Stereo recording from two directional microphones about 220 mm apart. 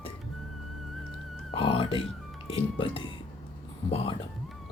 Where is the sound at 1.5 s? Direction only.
25° left (ahead or behind).